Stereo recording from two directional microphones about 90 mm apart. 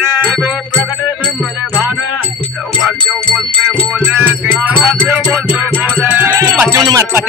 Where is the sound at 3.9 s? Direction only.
15° right (ahead or behind).